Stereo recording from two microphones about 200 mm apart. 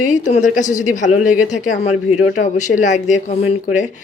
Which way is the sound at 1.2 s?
5° right (ahead or behind).